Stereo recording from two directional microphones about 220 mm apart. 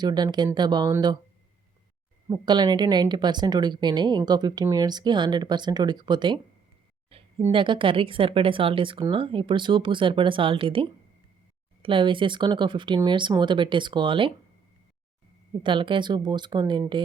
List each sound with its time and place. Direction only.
0.0 s speech: 20° right (ahead or behind)
2.3 s speech: 20° right (ahead or behind)
7.1 s a sound: 25° right (ahead or behind)
7.4 s speech: 20° right (ahead or behind)
15.6 s speech: 20° right (ahead or behind)